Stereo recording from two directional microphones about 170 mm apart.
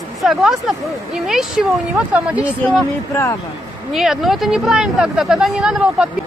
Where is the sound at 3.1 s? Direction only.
15° left (ahead or behind).